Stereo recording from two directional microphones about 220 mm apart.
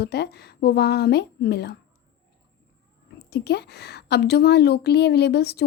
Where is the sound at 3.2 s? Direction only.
50° left (ahead or behind).